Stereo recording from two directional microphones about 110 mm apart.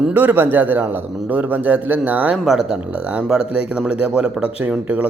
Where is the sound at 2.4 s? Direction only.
5° right (ahead or behind).